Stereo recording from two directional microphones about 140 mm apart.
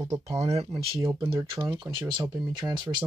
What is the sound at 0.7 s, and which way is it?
Speech, 35° right (ahead or behind).